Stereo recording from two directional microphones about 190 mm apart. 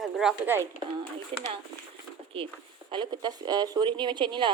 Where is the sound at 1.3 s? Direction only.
30° right (ahead or behind).